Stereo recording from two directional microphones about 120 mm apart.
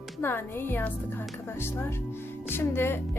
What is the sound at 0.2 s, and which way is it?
Speech, 20° left (ahead or behind).